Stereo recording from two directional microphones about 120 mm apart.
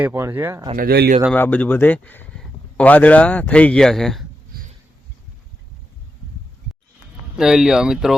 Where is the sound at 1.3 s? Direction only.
15° left (ahead or behind).